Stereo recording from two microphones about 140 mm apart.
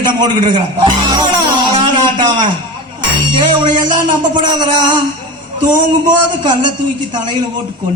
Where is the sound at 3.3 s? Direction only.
35° right (ahead or behind).